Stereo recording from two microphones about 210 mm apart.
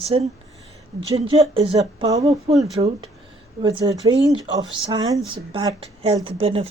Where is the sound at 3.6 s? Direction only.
20° right (ahead or behind).